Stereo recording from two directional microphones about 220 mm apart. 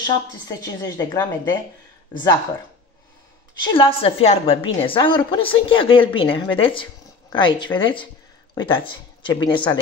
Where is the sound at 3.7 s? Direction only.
25° left (ahead or behind).